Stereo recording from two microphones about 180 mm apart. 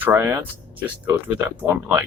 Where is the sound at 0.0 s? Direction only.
10° right (ahead or behind).